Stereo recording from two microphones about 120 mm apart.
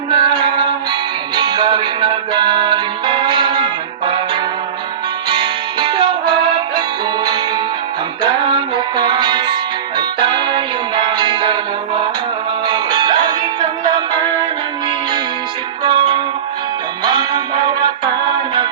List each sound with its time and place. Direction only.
0.1 s music: 40° right (ahead or behind)
12.6 s music: 40° right (ahead or behind)
15.8 s music: 40° right (ahead or behind)